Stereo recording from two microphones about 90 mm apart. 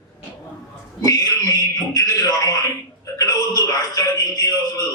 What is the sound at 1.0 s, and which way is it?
Speech, 40° left (ahead or behind).